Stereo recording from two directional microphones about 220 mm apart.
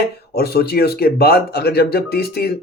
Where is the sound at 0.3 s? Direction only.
45° left (ahead or behind).